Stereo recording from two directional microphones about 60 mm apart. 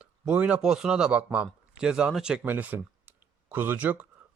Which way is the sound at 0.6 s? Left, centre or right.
Centre.